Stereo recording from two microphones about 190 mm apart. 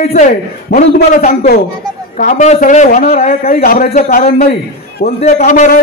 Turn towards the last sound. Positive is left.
turn(degrees=45)  # may be behind; listen again after turning